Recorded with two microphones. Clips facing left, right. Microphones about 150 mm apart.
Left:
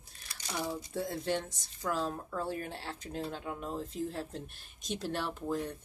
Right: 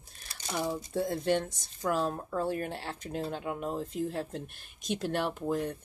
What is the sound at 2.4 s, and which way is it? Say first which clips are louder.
Speech: right 5 dB; 60° right (ahead or behind).